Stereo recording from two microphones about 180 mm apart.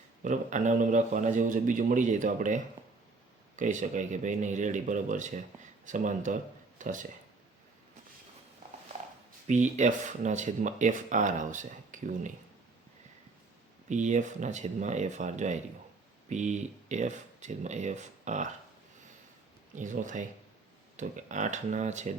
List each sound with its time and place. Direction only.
0.2 s speech: 45° right (ahead or behind)
9.5 s speech: 40° right (ahead or behind)
13.9 s speech: 40° right (ahead or behind)
19.7 s speech: 45° right (ahead or behind)